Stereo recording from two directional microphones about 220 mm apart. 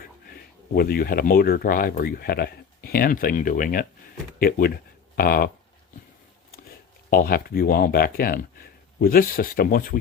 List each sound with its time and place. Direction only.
0.0 s speech: 40° left (ahead or behind)
7.1 s speech: 40° left (ahead or behind)